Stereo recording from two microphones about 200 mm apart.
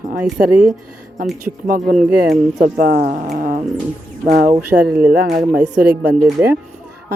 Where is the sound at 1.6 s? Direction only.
40° right (ahead or behind).